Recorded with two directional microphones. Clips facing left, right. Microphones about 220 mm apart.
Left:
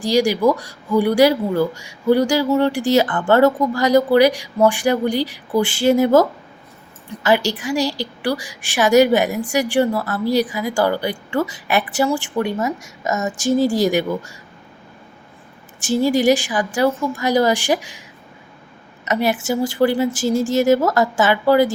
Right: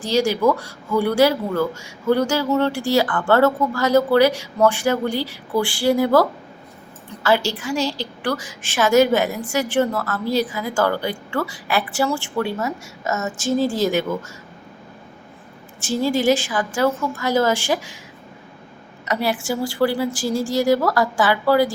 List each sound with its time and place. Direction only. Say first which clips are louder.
0.0 s a woman's voice: left 2 dB; 15° left (ahead or behind)
15.8 s a woman's voice: left 3 dB; 15° left (ahead or behind)
19.0 s a woman's voice: left 3 dB; 20° left (ahead or behind)